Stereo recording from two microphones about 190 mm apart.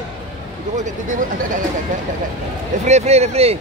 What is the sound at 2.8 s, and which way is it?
Speech, 35° right (ahead or behind).